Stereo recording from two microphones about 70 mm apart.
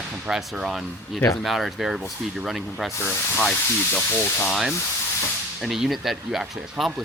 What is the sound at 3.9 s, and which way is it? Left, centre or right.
Speech, left.